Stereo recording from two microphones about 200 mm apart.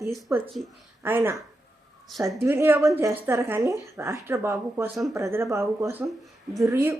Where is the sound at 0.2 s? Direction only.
15° right (ahead or behind).